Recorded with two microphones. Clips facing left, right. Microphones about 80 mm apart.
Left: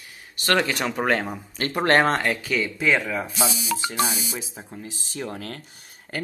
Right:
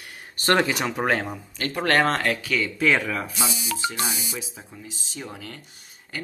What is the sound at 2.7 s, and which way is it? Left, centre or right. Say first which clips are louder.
Speech: right 1 dB; centre.